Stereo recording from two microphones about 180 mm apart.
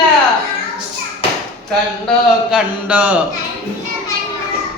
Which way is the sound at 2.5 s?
5° right (ahead or behind).